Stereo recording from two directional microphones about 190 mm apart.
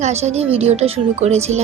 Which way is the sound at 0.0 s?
35° right (ahead or behind).